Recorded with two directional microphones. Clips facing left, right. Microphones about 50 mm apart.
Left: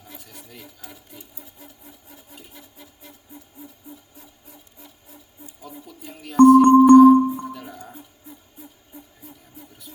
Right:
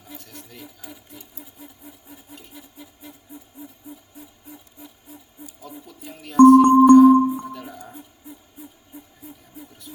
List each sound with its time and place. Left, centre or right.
0.0 s speech: centre
5.6 s music: centre